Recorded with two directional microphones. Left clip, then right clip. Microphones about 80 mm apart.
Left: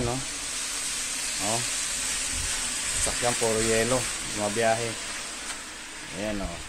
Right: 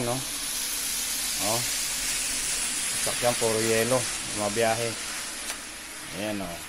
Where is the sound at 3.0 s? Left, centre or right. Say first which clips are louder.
Right 1 dB; centre.